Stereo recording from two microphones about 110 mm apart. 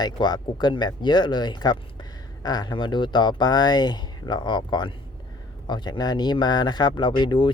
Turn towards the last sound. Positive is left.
turn(degrees=45)  # may be behind; listen again after turning